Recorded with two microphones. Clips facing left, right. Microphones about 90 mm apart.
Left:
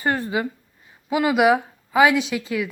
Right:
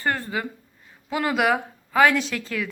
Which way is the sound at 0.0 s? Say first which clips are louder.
Left 3 dB; 20° left (ahead or behind).